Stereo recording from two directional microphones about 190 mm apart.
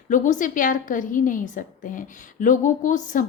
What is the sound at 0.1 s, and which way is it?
A woman's voice, 45° left (ahead or behind).